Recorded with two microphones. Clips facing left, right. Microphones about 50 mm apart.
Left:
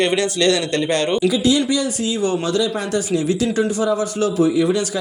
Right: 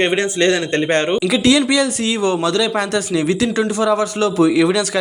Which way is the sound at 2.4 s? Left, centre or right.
Right.